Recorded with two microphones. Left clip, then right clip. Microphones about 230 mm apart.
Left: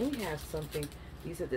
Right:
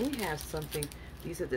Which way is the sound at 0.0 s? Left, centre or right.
Right.